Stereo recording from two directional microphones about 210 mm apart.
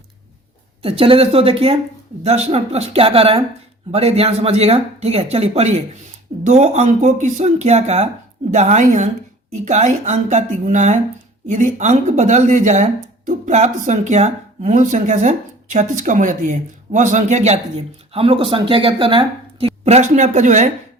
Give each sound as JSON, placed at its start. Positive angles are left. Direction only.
{"t": 0.8, "sound": "speech", "side_deg": -25}